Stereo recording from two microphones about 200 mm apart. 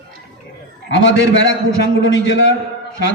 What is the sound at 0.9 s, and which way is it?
Speech, 65° left (ahead or behind).